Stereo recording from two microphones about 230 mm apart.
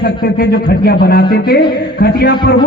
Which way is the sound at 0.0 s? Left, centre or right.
Left.